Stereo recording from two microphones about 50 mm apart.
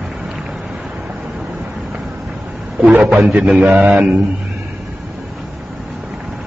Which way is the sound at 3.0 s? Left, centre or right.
Right.